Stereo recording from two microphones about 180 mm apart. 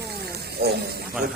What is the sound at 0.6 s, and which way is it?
Speech, 60° right (ahead or behind).